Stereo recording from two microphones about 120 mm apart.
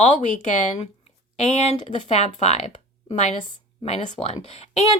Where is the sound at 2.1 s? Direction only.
65° left (ahead or behind).